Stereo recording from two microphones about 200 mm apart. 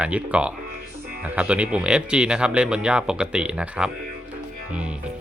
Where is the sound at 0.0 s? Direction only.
5° right (ahead or behind).